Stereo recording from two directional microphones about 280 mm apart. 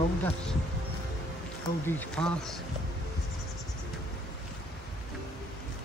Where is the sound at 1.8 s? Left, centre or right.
Centre.